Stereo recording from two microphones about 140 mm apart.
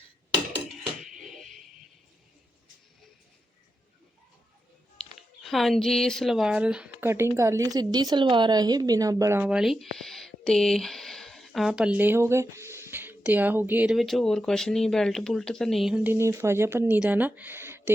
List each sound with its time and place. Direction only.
1.1 s a sound: centre (ahead or behind)
5.4 s speech: centre (ahead or behind)
7.1 s a woman's voice: 20° right (ahead or behind)
9.4 s speech: 5° right (ahead or behind)
16.0 s speech: 20° right (ahead or behind)